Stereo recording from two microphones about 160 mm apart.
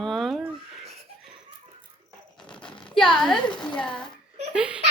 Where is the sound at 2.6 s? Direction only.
30° left (ahead or behind).